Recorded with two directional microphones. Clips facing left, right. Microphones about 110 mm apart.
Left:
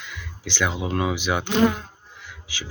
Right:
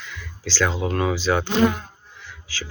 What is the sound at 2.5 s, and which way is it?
Speech, 15° left (ahead or behind).